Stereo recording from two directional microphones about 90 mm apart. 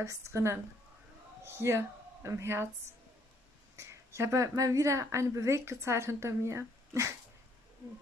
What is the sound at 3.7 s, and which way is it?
A woman's voice, 30° right (ahead or behind).